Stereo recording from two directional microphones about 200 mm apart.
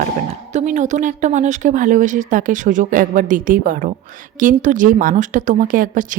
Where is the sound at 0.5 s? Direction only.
40° right (ahead or behind).